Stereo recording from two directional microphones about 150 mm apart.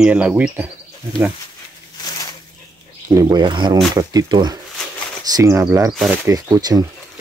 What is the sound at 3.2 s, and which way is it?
Speech, 30° right (ahead or behind).